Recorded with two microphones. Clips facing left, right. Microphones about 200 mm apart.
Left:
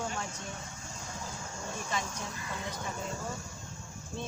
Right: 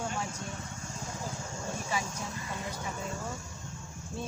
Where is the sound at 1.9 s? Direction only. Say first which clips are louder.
Right 1 dB; 10° right (ahead or behind).